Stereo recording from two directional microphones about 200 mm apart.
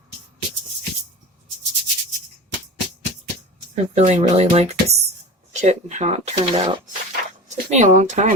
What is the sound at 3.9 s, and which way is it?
Speech, 35° right (ahead or behind).